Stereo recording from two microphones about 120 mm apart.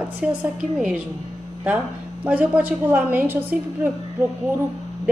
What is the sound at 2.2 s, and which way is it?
A woman's voice, 15° right (ahead or behind).